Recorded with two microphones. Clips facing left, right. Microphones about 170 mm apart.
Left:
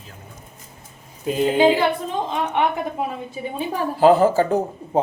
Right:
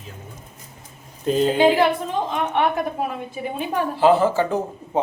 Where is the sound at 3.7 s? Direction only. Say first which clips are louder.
Left 2 dB; 45° left (ahead or behind).